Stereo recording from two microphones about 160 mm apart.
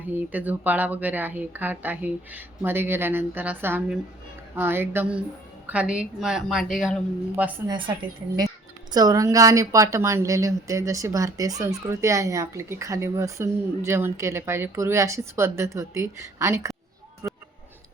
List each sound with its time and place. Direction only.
0.1 s a woman's voice: 10° right (ahead or behind)
7.7 s a woman's voice: 30° right (ahead or behind)
17.2 s a sound: 15° right (ahead or behind)